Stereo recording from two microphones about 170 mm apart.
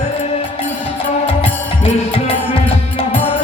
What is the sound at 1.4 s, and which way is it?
Music, 35° left (ahead or behind).